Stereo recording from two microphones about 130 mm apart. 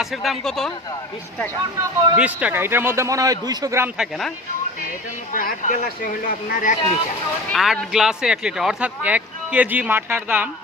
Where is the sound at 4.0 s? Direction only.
Centre (ahead or behind).